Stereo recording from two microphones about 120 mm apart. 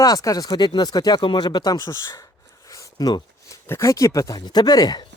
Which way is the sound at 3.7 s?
25° left (ahead or behind).